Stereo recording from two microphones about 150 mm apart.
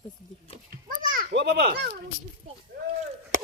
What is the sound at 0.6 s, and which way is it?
A child's voice, 65° right (ahead or behind).